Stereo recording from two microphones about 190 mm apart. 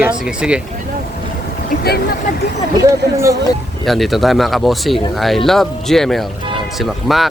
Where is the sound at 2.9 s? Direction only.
15° right (ahead or behind).